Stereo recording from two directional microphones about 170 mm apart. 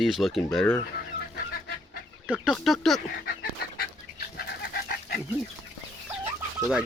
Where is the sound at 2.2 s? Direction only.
5° right (ahead or behind).